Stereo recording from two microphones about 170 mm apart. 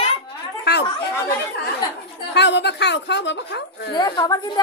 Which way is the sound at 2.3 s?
90° left.